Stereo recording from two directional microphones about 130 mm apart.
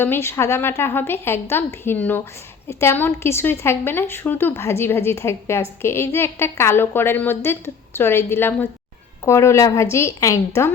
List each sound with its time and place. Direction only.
0.0 s a woman's voice: 20° left (ahead or behind)